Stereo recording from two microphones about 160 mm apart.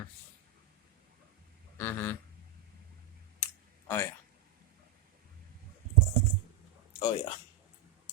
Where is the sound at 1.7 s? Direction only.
10° left (ahead or behind).